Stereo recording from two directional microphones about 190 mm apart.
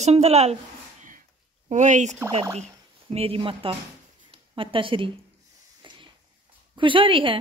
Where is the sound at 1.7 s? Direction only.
40° right (ahead or behind).